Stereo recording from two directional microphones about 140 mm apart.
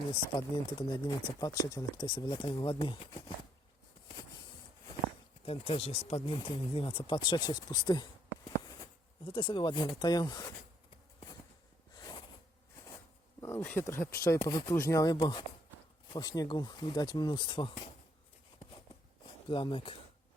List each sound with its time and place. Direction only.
0.1 s speech: 30° left (ahead or behind)
5.5 s speech: 45° left (ahead or behind)
8.4 s a sound: 30° left (ahead or behind)
9.2 s speech: 35° left (ahead or behind)
11.9 s a sound: 30° left (ahead or behind)
13.4 s speech: 15° left (ahead or behind); by 17.8 s 35° left (ahead or behind)
19.5 s speech: 35° left (ahead or behind)